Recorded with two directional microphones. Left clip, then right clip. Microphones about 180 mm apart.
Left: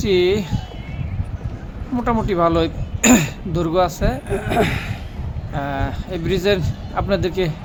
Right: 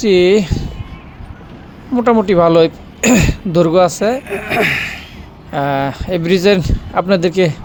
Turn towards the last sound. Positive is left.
turn(degrees=-45)  # may be behind; listen again after turning